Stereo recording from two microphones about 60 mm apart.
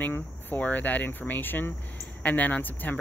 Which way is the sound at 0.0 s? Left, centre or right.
Left.